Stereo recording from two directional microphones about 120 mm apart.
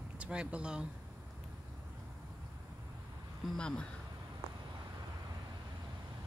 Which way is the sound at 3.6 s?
5° left (ahead or behind).